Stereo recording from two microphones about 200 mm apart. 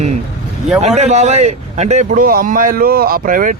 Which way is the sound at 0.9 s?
35° right (ahead or behind).